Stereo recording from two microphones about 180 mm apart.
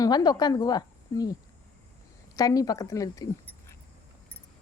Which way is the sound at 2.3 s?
20° left (ahead or behind).